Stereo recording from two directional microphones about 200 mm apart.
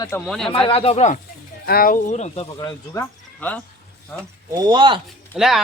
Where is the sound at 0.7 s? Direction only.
30° left (ahead or behind).